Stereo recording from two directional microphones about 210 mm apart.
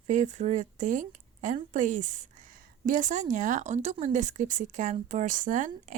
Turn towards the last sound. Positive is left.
turn(degrees=-35)  # may be behind; listen again after turning